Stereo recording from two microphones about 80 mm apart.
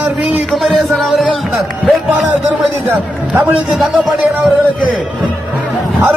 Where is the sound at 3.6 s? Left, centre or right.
Centre.